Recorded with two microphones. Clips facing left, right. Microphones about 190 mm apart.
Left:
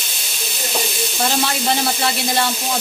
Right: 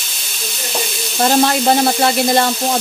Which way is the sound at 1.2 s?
50° right (ahead or behind).